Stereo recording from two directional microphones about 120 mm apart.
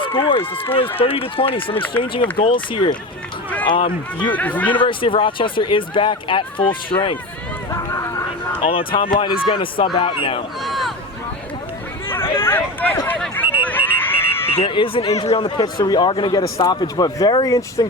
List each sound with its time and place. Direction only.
0.1 s speech: 45° left (ahead or behind)
4.3 s speech: 15° left (ahead or behind)
4.8 s speech: 45° left (ahead or behind)
7.7 s run: 25° left (ahead or behind)
8.7 s speech: 45° left (ahead or behind)
10.6 s a sound: centre (ahead or behind)
12.0 s a sound: 20° left (ahead or behind)
13.6 s run: 15° left (ahead or behind)
14.5 s speech: 50° left (ahead or behind); by 17.8 s 30° left (ahead or behind)